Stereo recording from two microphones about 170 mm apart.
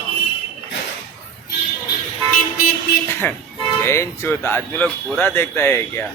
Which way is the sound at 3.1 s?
15° left (ahead or behind).